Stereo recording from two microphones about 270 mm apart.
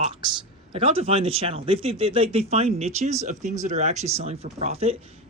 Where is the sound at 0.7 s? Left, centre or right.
Right.